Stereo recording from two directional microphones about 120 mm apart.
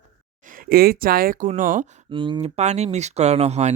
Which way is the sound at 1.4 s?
90° right.